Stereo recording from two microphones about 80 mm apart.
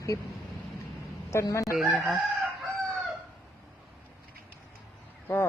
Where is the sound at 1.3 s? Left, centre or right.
Left.